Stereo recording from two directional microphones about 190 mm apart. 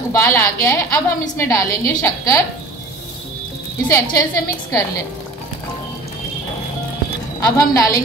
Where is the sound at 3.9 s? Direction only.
20° left (ahead or behind).